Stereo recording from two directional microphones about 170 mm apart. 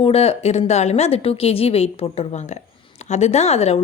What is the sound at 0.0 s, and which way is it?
A woman's voice, 35° left (ahead or behind).